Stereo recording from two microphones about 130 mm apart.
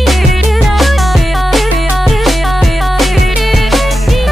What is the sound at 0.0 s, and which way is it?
Music, centre (ahead or behind).